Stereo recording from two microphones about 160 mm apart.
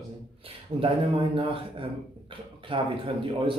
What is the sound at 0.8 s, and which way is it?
A man's voice, 35° right (ahead or behind).